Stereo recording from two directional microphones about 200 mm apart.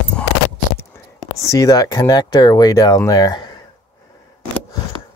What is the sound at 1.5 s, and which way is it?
Speech, 15° left (ahead or behind).